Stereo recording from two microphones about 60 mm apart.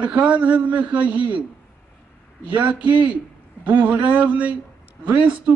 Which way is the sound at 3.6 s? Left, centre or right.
Right.